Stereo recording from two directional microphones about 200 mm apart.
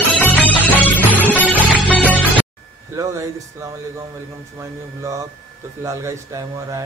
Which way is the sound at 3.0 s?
15° right (ahead or behind).